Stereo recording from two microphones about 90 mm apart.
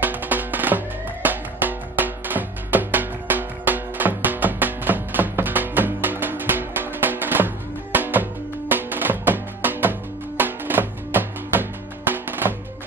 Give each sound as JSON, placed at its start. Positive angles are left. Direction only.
{"t": 0.0, "sound": "music", "side_deg": -20}